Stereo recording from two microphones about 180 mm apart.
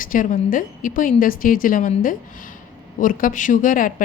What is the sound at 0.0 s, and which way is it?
A woman's voice, 50° left (ahead or behind).